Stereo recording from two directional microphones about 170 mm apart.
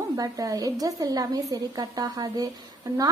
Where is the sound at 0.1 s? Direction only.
20° right (ahead or behind).